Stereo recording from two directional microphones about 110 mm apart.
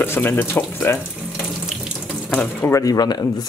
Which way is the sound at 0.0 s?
20° left (ahead or behind).